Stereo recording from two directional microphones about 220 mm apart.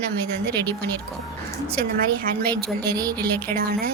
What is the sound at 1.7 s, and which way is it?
Speech, 45° right (ahead or behind).